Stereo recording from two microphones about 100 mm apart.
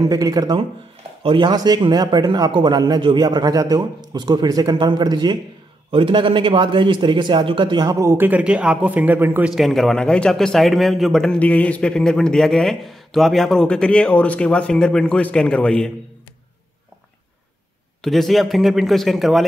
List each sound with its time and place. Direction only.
0.0 s speech: 40° right (ahead or behind)
1.2 s a man's voice: 55° right (ahead or behind)
3.3 s a man's voice: 40° right (ahead or behind)
5.9 s a man's voice: 60° right (ahead or behind)
7.8 s speech: 35° right (ahead or behind)
8.3 s speech: 15° right (ahead or behind)
9.5 s a man's voice: centre (ahead or behind)
11.3 s a man's voice: 15° left (ahead or behind)
18.0 s a man's voice: centre (ahead or behind)